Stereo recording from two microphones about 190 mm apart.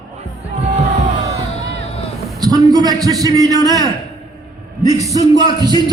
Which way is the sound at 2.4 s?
20° right (ahead or behind).